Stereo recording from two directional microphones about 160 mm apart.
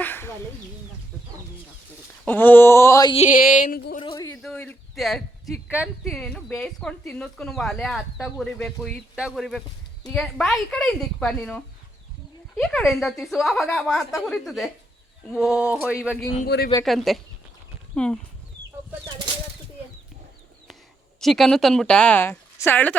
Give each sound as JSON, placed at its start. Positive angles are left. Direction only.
{"t": 0.0, "sound": "chicken", "side_deg": 15}
{"t": 2.2, "sound": "a woman's voice", "side_deg": 10}
{"t": 3.2, "sound": "a sound", "side_deg": 60}
{"t": 4.0, "sound": "a sound", "side_deg": 25}
{"t": 4.4, "sound": "a woman's voice", "side_deg": 5}
{"t": 21.2, "sound": "a woman's voice", "side_deg": 0}